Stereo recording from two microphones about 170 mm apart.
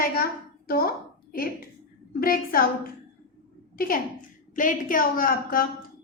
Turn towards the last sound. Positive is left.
turn(degrees=55)  # may be behind; listen again after turning